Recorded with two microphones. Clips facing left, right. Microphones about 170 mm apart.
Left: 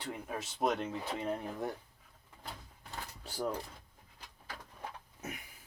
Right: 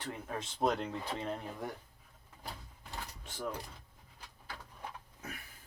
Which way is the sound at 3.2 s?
35° left (ahead or behind).